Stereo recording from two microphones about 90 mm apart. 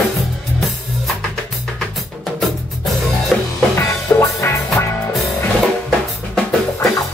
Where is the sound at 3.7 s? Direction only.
30° left (ahead or behind).